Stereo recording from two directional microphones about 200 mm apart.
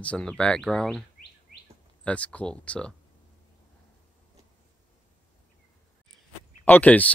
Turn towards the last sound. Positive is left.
turn(degrees=5)  # may be behind; listen again after turning